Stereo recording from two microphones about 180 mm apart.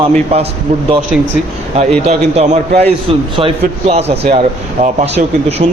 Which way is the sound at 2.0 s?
40° right (ahead or behind).